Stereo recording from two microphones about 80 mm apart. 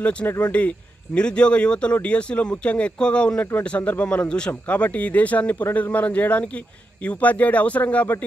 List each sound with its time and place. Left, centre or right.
0.0 s speech: centre